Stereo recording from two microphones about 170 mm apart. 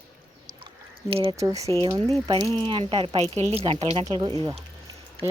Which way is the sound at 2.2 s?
30° right (ahead or behind).